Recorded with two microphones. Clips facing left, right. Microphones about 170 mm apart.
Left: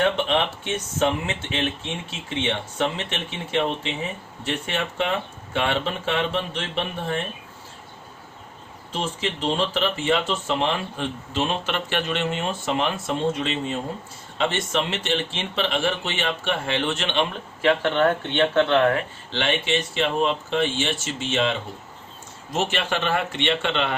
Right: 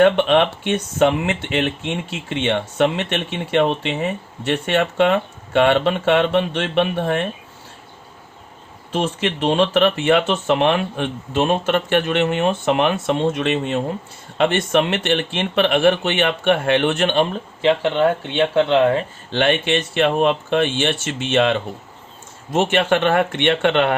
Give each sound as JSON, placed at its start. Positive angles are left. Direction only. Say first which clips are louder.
{"t": 0.0, "sound": "speech", "louder": "right 8 dB", "side_deg": -65}
{"t": 8.9, "sound": "speech", "louder": "right 6 dB", "side_deg": -65}
{"t": 17.6, "sound": "speech", "louder": "right 3 dB", "side_deg": -20}
{"t": 19.3, "sound": "speech", "louder": "right 6 dB", "side_deg": -55}